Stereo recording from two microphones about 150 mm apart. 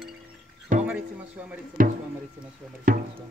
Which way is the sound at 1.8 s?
70° right (ahead or behind).